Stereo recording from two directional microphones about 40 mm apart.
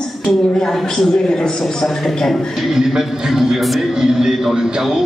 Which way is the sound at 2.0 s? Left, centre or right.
Centre.